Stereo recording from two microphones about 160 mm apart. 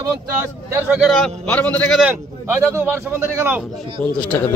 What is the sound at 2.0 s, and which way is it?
A man's voice, 15° right (ahead or behind).